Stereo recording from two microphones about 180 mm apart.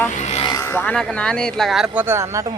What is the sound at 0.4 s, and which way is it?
Speech, 15° left (ahead or behind).